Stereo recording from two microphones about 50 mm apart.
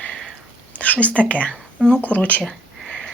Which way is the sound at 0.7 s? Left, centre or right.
Left.